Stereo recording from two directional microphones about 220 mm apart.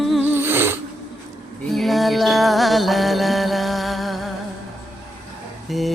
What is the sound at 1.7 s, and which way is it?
Music, centre (ahead or behind).